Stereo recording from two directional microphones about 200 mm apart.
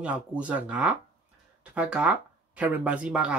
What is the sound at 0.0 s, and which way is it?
Speech, 5° right (ahead or behind).